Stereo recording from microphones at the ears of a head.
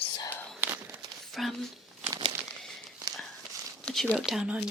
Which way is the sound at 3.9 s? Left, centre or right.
Centre.